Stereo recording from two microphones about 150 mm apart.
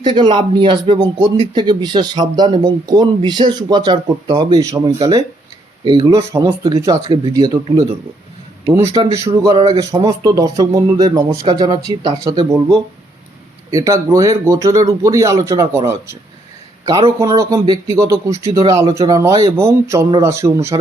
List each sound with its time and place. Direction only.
0.0 s speech: 30° right (ahead or behind)
6.3 s speech: 20° right (ahead or behind)
9.1 s speech: 20° right (ahead or behind)
9.6 s speech: 40° right (ahead or behind)
9.9 s speech: 25° right (ahead or behind)
13.7 s speech: 20° right (ahead or behind)